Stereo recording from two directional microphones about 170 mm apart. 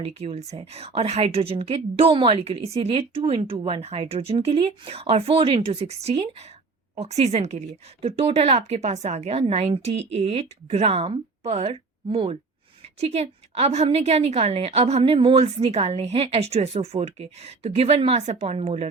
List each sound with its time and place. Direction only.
0.0 s a woman's voice: 35° right (ahead or behind)